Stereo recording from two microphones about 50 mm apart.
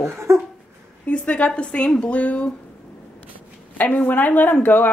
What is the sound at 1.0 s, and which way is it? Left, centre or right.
A woman's voice, left.